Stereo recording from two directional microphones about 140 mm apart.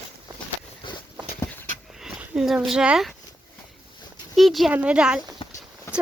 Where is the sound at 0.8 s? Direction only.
35° left (ahead or behind).